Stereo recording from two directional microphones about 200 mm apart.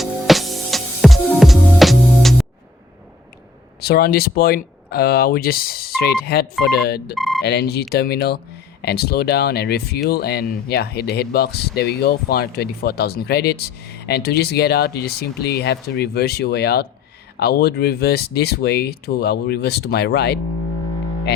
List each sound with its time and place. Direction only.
0.0 s music: centre (ahead or behind)
3.8 s speech: 50° left (ahead or behind)
7.2 s speech: centre (ahead or behind)
7.4 s speech: 55° left (ahead or behind)